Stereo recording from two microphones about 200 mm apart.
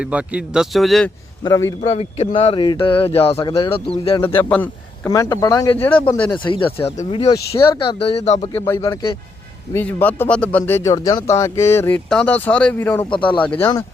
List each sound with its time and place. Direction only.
0.0 s speech: 5° right (ahead or behind)
1.5 s speech: 15° left (ahead or behind)
1.8 s speech: 30° left (ahead or behind)
4.2 s speech: 10° left (ahead or behind)
5.8 s speech: 10° left (ahead or behind)
6.4 s speech: 25° left (ahead or behind)
6.7 s speech: 10° left (ahead or behind)
7.1 s speech: 25° left (ahead or behind)
7.9 s speech: 30° left (ahead or behind)
8.6 s speech: 15° left (ahead or behind)
9.7 s speech: 10° left (ahead or behind)
13.1 s speech: 25° left (ahead or behind)
13.4 s speech: 5° left (ahead or behind)